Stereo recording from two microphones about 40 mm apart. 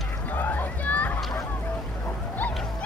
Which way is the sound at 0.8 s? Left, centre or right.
Left.